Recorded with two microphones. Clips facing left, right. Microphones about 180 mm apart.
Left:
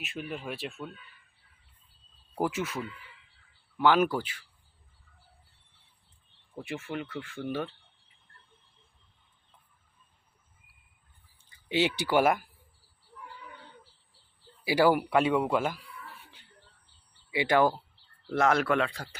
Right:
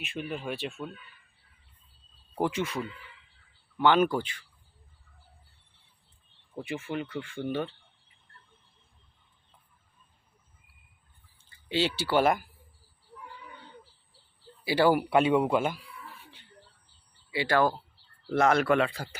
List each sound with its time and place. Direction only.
0.0 s speech: centre (ahead or behind)
2.4 s speech: 5° left (ahead or behind)
6.6 s speech: centre (ahead or behind)
11.4 s speech: 15° left (ahead or behind)
14.6 s speech: 10° left (ahead or behind)
14.9 s speech: 10° right (ahead or behind)
17.3 s speech: 20° left (ahead or behind)
18.3 s speech: centre (ahead or behind)